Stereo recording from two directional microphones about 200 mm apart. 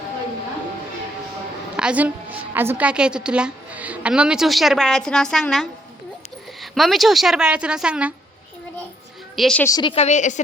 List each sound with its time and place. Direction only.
1.7 s a woman's voice: 5° right (ahead or behind)
9.3 s a woman's voice: centre (ahead or behind)
9.6 s a woman's voice: 20° left (ahead or behind); by 10.4 s 35° left (ahead or behind)